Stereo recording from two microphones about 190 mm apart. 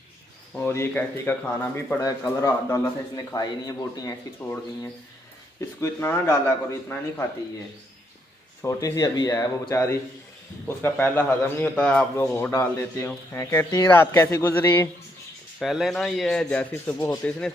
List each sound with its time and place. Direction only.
0.6 s a man's voice: 10° left (ahead or behind)
8.6 s a man's voice: 15° left (ahead or behind)
15.6 s speech: centre (ahead or behind)